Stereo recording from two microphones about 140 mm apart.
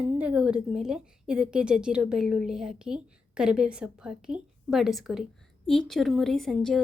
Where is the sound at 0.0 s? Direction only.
10° right (ahead or behind).